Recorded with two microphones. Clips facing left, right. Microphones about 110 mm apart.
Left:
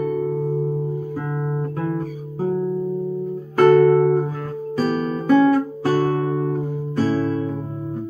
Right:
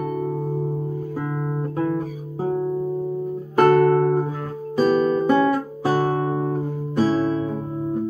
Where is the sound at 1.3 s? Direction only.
5° left (ahead or behind).